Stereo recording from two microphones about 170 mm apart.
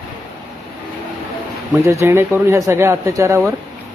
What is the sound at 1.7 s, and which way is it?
Speech, 15° right (ahead or behind).